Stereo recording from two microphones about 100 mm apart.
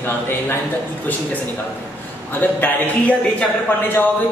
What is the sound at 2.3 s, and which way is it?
Speech, 20° left (ahead or behind).